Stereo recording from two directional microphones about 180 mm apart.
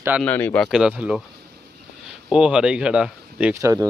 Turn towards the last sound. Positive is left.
turn(degrees=-5)  # may be behind; listen again after turning